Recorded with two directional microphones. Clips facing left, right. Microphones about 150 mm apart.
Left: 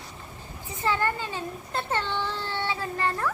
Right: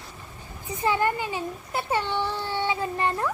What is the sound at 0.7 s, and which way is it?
A child's voice, 15° right (ahead or behind).